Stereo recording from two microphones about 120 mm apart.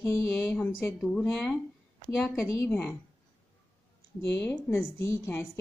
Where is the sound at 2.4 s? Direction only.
25° left (ahead or behind).